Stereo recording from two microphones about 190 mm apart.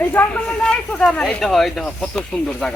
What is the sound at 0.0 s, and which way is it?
Speech, 10° left (ahead or behind).